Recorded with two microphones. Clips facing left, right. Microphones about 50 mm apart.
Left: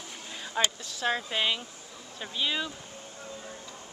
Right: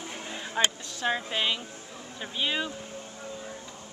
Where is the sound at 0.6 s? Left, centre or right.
Centre.